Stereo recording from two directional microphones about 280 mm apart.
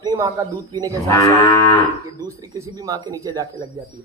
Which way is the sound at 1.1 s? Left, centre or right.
Centre.